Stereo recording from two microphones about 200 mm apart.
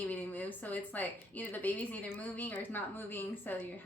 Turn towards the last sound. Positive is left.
turn(degrees=10)  # may be behind; listen again after turning